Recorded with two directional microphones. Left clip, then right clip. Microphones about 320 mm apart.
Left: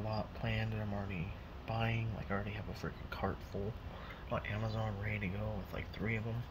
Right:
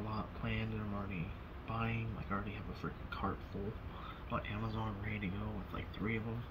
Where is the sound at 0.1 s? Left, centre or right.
Left.